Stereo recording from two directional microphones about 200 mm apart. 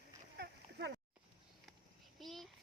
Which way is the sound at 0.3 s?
60° right (ahead or behind).